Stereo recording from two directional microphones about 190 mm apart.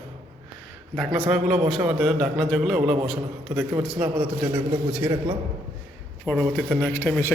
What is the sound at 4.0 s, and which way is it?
Speech, 5° right (ahead or behind).